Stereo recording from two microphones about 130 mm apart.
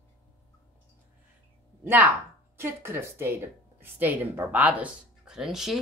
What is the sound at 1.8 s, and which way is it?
A woman's voice, 15° right (ahead or behind).